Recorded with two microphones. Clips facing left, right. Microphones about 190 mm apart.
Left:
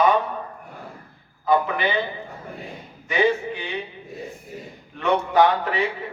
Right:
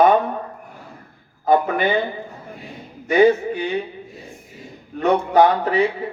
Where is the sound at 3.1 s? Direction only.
45° right (ahead or behind).